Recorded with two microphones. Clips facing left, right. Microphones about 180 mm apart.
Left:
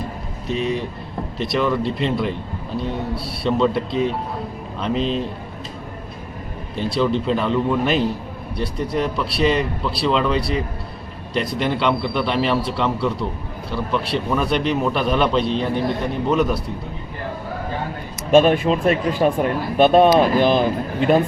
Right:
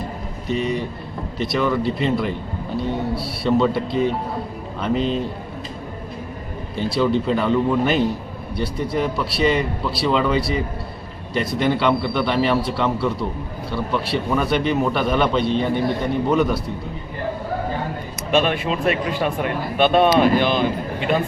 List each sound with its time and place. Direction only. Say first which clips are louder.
0.4 s a man's voice: even; centre (ahead or behind)
6.7 s a man's voice: right 1 dB; centre (ahead or behind)
18.3 s speech: left 6 dB; 45° left (ahead or behind)